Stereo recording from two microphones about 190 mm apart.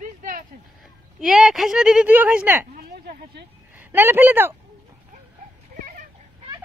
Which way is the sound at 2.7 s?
55° right (ahead or behind).